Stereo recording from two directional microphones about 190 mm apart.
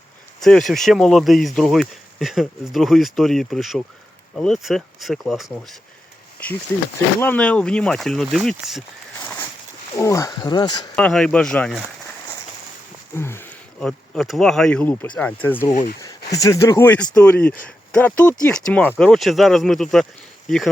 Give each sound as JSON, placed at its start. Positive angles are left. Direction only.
{"t": 0.3, "sound": "speech", "side_deg": 0}
{"t": 7.2, "sound": "speech", "side_deg": 5}
{"t": 9.9, "sound": "speech", "side_deg": 15}
{"t": 10.9, "sound": "speech", "side_deg": 5}
{"t": 13.1, "sound": "speech", "side_deg": 10}
{"t": 15.7, "sound": "speech", "side_deg": 45}
{"t": 16.0, "sound": "speech", "side_deg": 20}